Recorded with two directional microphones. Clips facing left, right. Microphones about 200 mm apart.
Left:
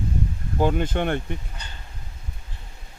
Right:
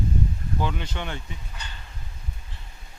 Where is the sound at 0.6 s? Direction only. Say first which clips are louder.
Left 10 dB; 50° left (ahead or behind).